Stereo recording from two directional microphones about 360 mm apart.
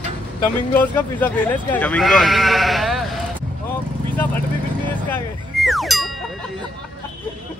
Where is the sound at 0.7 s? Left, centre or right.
Centre.